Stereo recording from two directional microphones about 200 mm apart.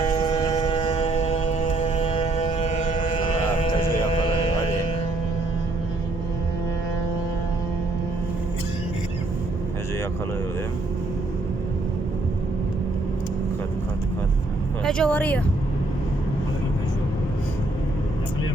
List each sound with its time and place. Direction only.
0.1 s a sound: 20° left (ahead or behind)
3.6 s music: 25° left (ahead or behind)
14.8 s speech: 5° left (ahead or behind)